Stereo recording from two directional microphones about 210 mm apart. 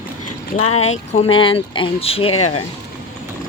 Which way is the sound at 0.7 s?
30° left (ahead or behind).